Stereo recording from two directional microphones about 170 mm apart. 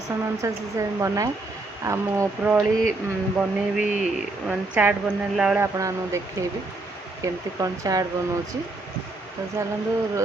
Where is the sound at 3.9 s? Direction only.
5° right (ahead or behind).